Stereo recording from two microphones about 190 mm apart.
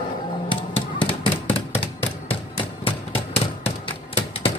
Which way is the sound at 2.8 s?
30° left (ahead or behind).